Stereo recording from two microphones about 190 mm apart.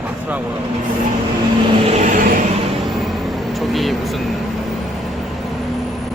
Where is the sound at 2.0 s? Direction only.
40° right (ahead or behind).